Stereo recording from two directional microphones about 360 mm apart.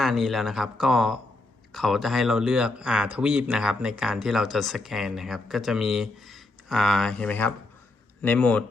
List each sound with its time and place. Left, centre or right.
0.0 s speech: centre